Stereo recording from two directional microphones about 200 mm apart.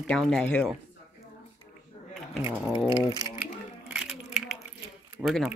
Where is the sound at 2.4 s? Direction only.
10° right (ahead or behind).